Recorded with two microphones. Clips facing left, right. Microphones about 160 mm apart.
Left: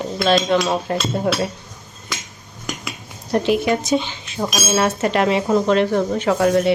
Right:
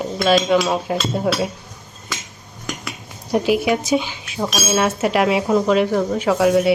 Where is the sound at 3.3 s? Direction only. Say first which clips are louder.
Even; 5° right (ahead or behind).